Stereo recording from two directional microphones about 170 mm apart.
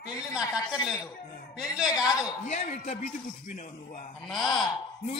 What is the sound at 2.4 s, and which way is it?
Speech, 45° left (ahead or behind).